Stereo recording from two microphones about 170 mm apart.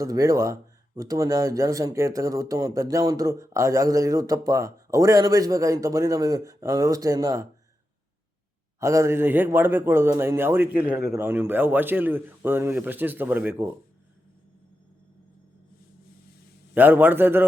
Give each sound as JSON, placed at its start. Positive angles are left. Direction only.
{"t": 0.0, "sound": "speech", "side_deg": -20}
{"t": 8.8, "sound": "speech", "side_deg": -15}
{"t": 16.7, "sound": "speech", "side_deg": -10}